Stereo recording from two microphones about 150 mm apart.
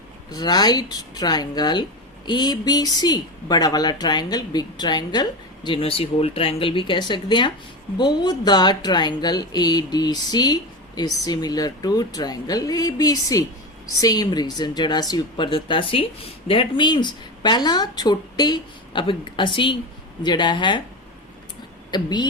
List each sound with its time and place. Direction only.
0.3 s speech: 25° left (ahead or behind)
21.9 s speech: 30° left (ahead or behind)